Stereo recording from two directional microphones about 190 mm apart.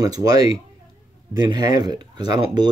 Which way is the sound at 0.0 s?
20° right (ahead or behind).